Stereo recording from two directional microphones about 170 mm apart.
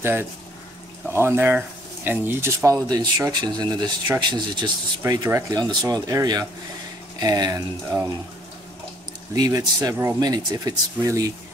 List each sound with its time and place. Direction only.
0.0 s speech: 15° right (ahead or behind)
9.3 s speech: 20° right (ahead or behind)